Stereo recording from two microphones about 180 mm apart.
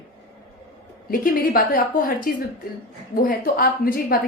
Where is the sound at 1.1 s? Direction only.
50° left (ahead or behind).